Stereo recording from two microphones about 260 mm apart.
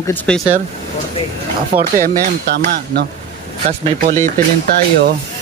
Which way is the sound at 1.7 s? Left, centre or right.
Right.